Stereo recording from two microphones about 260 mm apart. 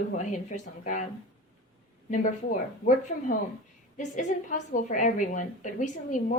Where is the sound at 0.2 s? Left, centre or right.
Left.